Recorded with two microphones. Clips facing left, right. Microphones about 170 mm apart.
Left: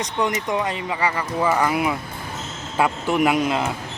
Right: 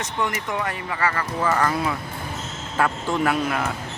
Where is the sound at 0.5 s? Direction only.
15° left (ahead or behind).